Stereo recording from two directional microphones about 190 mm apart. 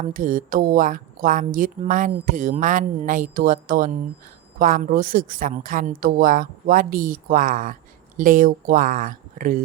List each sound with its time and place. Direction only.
0.0 s a woman's voice: 45° right (ahead or behind)